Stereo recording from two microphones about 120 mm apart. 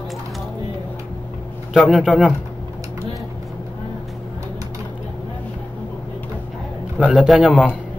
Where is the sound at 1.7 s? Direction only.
5° right (ahead or behind).